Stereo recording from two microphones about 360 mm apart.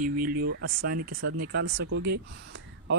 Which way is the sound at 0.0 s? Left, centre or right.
Right.